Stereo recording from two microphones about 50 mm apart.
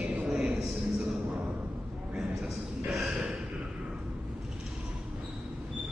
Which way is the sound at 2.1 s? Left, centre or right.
Centre.